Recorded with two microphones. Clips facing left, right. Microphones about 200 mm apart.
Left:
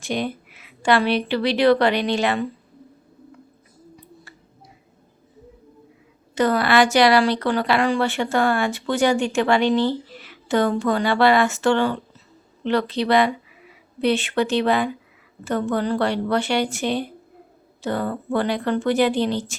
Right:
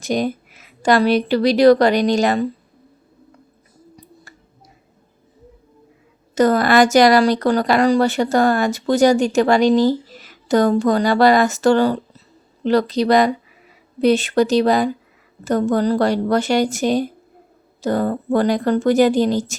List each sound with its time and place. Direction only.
0.0 s speech: 40° right (ahead or behind)
3.9 s finger snapping: 45° right (ahead or behind)
6.3 s speech: 45° right (ahead or behind)